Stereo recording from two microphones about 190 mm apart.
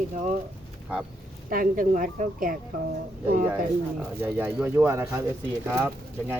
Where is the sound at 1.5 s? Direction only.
45° right (ahead or behind).